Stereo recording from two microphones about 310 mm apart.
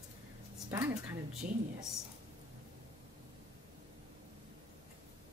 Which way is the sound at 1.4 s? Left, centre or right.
Right.